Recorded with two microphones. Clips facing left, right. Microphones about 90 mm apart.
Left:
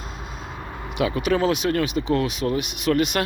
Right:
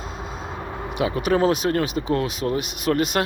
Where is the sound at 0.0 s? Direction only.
35° right (ahead or behind).